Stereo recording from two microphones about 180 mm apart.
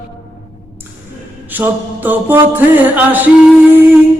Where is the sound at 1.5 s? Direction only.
10° right (ahead or behind).